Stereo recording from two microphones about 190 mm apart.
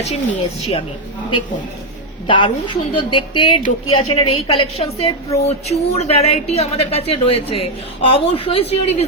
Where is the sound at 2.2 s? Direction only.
25° left (ahead or behind).